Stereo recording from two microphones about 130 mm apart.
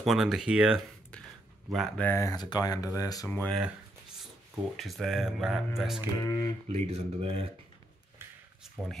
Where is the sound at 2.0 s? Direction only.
20° left (ahead or behind).